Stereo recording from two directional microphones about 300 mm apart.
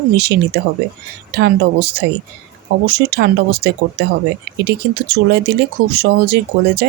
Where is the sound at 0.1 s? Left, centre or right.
Right.